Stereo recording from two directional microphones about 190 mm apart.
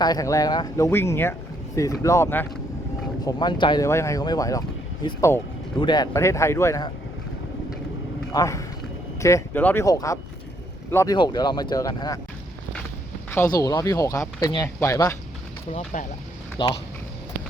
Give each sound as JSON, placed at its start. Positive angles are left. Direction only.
{"t": 0.0, "sound": "speech", "side_deg": 20}
{"t": 3.2, "sound": "speech", "side_deg": 20}
{"t": 8.3, "sound": "speech", "side_deg": 15}
{"t": 13.3, "sound": "speech", "side_deg": 15}
{"t": 15.7, "sound": "speech", "side_deg": 40}
{"t": 16.6, "sound": "speech", "side_deg": 25}